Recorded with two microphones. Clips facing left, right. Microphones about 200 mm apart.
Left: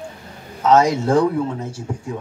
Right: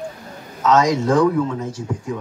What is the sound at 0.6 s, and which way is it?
Speech, 30° left (ahead or behind).